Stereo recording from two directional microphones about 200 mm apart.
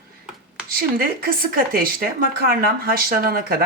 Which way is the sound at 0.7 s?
45° right (ahead or behind).